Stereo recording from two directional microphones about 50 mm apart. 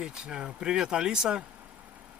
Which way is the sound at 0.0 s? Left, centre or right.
Centre.